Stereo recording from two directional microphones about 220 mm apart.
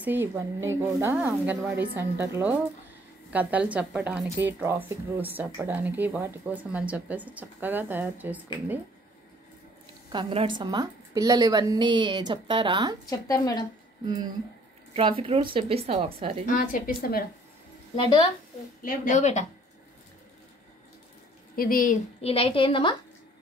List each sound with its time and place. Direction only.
0.0 s a woman's voice: 10° right (ahead or behind)
10.1 s a woman's voice: 20° right (ahead or behind)
13.0 s a woman's voice: 15° left (ahead or behind)
14.0 s a woman's voice: 20° right (ahead or behind)
16.5 s a woman's voice: 40° left (ahead or behind)
18.9 s a woman's voice: 35° left (ahead or behind)
21.5 s a woman's voice: 40° left (ahead or behind); by 22.9 s 25° left (ahead or behind)